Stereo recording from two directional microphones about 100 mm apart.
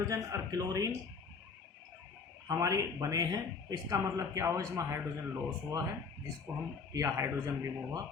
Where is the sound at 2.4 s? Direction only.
35° right (ahead or behind).